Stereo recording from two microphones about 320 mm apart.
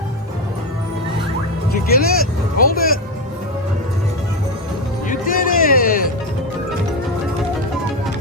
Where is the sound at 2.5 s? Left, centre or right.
Left.